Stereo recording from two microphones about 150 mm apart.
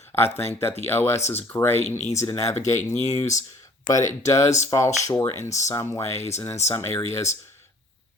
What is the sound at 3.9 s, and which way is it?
Speech, 20° left (ahead or behind).